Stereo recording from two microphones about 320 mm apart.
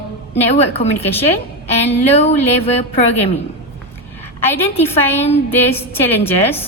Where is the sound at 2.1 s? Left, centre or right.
Centre.